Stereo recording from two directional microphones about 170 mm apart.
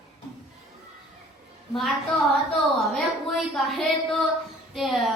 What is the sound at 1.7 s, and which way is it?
Speech, centre (ahead or behind).